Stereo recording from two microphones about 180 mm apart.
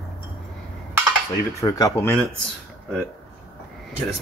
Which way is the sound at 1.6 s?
20° left (ahead or behind).